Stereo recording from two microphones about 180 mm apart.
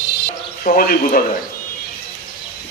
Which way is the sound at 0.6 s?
50° left (ahead or behind).